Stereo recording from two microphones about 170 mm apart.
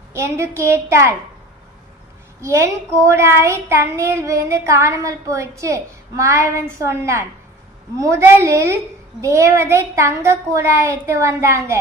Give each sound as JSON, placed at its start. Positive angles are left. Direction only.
{"t": 0.1, "sound": "a child's voice", "side_deg": -15}
{"t": 2.4, "sound": "a child's voice", "side_deg": -15}